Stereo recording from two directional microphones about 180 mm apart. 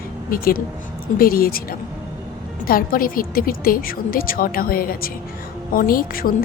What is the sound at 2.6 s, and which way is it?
A woman's voice, 55° left (ahead or behind).